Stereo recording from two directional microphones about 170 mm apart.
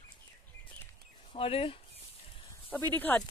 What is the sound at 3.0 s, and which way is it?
Speech, 10° left (ahead or behind).